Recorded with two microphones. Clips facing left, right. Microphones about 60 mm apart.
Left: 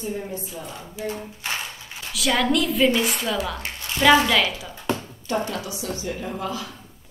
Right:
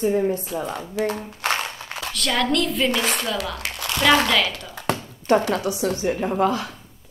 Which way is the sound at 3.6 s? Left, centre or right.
Right.